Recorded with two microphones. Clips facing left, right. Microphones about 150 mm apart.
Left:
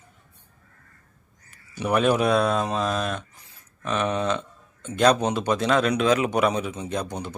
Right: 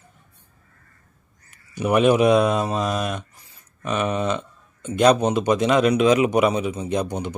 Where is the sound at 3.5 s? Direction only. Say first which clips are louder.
Right 2 dB; 5° right (ahead or behind).